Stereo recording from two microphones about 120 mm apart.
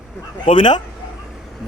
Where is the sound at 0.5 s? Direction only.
40° left (ahead or behind).